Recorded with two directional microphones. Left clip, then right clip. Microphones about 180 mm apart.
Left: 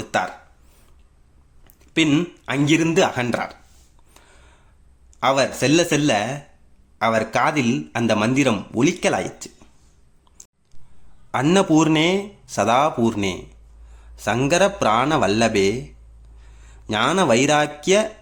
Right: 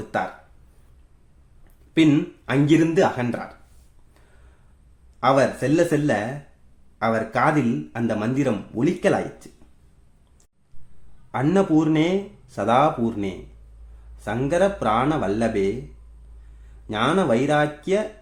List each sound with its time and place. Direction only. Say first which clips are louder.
0.1 s a sound: left 3 dB; 5° left (ahead or behind)
2.0 s speech: even; 5° left (ahead or behind)
5.2 s speech: even; 10° left (ahead or behind)
11.3 s speech: left 3 dB; 10° left (ahead or behind)
16.8 s speech: left 3 dB; 15° left (ahead or behind)